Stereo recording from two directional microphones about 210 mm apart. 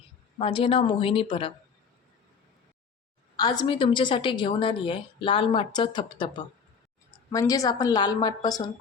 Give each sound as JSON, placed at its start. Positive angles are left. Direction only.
{"t": 0.3, "sound": "a woman's voice", "side_deg": 25}
{"t": 3.3, "sound": "a woman's voice", "side_deg": 20}